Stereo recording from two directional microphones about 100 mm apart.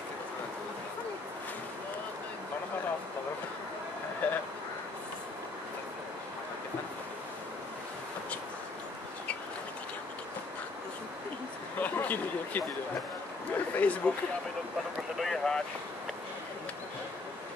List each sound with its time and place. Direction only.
4.2 s vehicle: 15° left (ahead or behind)
11.8 s a sound: 15° left (ahead or behind)
13.7 s speech: 15° left (ahead or behind)
15.1 s boat: 5° left (ahead or behind)